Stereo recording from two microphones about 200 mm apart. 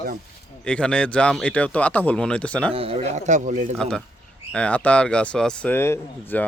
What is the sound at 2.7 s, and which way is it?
A man's voice, 30° right (ahead or behind).